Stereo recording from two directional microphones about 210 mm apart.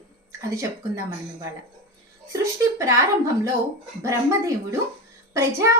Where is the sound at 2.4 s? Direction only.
15° right (ahead or behind).